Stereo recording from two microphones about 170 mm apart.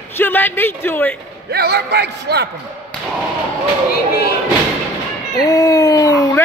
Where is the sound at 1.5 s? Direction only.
75° right (ahead or behind).